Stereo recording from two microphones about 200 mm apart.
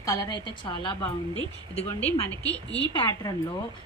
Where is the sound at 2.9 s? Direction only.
25° left (ahead or behind).